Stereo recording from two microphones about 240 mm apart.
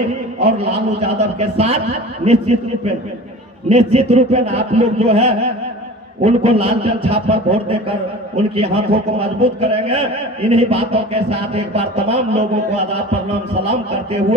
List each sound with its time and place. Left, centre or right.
0.4 s speech: right